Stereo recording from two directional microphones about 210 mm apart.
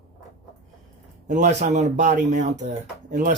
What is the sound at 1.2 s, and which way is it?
Speech, 35° right (ahead or behind).